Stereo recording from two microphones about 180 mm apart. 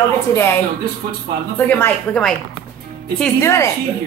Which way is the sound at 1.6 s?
10° left (ahead or behind).